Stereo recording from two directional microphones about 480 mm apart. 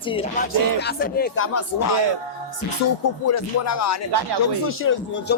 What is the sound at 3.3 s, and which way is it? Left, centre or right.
Speech, left.